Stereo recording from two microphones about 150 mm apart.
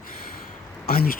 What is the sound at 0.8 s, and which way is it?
Speech, 80° left.